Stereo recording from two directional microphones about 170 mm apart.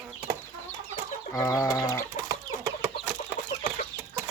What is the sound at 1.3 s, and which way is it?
Speech, 20° left (ahead or behind).